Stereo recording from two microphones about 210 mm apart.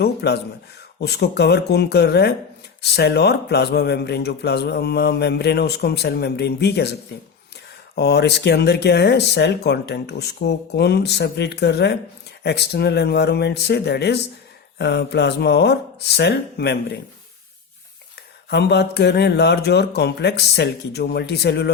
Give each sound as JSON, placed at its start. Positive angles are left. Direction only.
{"t": 0.0, "sound": "speech", "side_deg": 50}
{"t": 7.9, "sound": "speech", "side_deg": 50}
{"t": 18.5, "sound": "speech", "side_deg": 50}